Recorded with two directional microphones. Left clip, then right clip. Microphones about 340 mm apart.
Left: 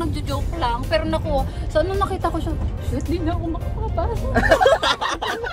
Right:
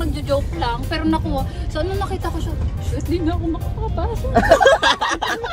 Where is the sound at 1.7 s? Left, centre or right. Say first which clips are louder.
Left 4 dB; left.